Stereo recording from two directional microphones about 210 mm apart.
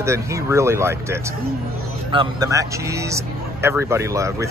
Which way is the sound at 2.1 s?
20° right (ahead or behind).